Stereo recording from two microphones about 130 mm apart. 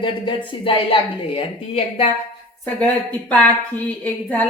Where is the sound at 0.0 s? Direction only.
40° left (ahead or behind).